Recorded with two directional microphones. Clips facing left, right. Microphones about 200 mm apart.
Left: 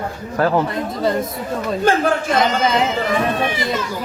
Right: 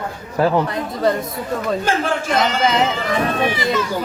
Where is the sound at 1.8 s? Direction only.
50° left (ahead or behind).